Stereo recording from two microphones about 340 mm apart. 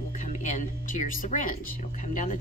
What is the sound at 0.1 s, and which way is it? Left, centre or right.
Speech, left.